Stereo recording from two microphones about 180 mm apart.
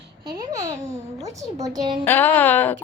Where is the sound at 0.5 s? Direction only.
20° right (ahead or behind).